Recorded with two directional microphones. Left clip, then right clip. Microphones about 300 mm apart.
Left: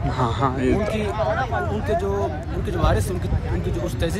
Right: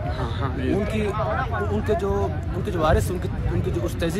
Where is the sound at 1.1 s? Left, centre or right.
Left.